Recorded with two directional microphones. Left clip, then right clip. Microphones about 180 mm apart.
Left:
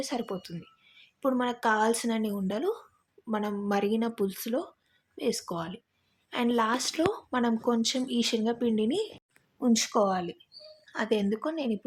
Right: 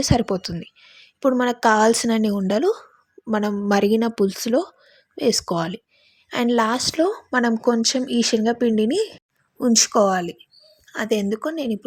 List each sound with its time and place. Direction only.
0.0 s speech: 40° right (ahead or behind); by 11.9 s 20° right (ahead or behind)